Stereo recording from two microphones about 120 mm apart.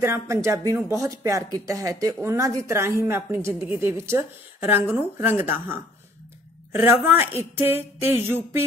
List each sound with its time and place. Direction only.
0.0 s speech: 25° right (ahead or behind)